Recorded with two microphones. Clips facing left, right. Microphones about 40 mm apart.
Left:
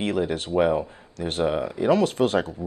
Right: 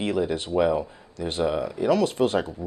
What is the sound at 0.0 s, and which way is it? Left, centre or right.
Speech, left.